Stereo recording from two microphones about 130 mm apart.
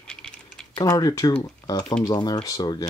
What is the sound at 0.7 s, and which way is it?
Speech, 30° left (ahead or behind).